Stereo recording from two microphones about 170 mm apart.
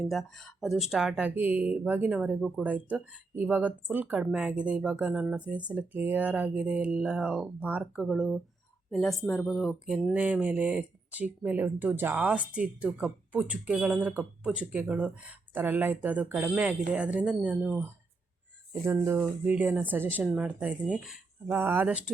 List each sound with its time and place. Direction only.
0.0 s speech: centre (ahead or behind)